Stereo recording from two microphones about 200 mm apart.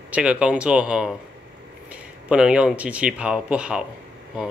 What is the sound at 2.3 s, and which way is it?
Speech, 5° right (ahead or behind).